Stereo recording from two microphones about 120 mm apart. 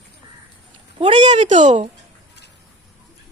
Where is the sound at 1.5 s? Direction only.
90° right.